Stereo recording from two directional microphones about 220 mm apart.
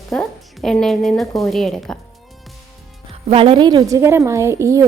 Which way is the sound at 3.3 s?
25° right (ahead or behind).